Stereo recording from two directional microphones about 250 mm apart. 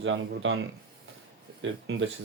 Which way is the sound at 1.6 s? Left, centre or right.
Right.